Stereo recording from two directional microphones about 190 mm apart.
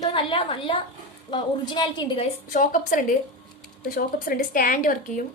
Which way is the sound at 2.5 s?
45° left (ahead or behind).